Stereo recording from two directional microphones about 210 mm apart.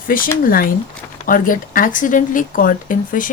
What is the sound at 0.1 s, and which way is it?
Speech, 40° left (ahead or behind).